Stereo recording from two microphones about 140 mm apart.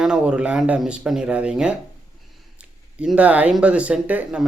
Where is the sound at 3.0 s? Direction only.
10° right (ahead or behind).